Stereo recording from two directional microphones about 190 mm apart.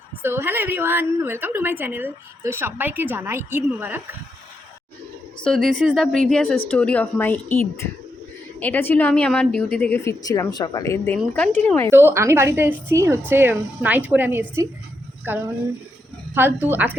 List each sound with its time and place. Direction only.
0.2 s a woman's voice: 10° right (ahead or behind)
5.4 s speech: centre (ahead or behind)
8.5 s speech: 10° left (ahead or behind)
11.9 s a woman's voice: 10° right (ahead or behind)